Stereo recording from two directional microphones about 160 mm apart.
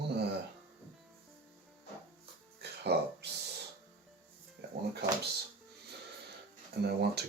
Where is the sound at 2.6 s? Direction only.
90° right.